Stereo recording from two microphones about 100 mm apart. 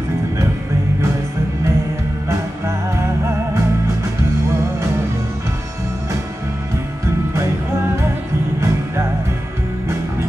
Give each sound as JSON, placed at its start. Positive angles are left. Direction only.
{"t": 2.2, "sound": "music", "side_deg": -25}
{"t": 8.5, "sound": "music", "side_deg": -25}